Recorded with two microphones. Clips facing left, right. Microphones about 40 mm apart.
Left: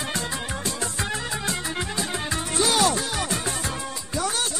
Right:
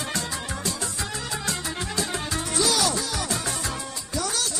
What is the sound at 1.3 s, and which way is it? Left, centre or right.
Music, left.